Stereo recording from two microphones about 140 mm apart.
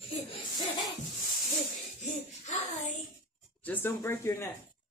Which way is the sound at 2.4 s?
60° left (ahead or behind).